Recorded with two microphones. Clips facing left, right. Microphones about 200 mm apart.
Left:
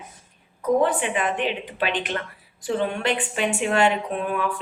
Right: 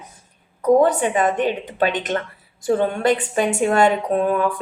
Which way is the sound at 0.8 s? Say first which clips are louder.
Right 5 dB; 45° right (ahead or behind).